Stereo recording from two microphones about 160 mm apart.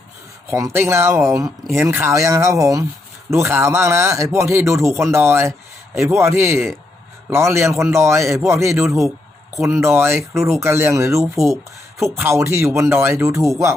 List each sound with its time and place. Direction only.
0.5 s a man's voice: 15° right (ahead or behind)